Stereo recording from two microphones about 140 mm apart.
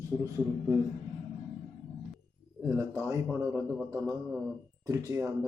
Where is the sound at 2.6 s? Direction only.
15° right (ahead or behind).